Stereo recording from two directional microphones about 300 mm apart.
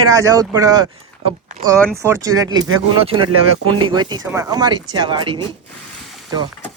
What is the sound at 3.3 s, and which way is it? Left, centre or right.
Speech, right.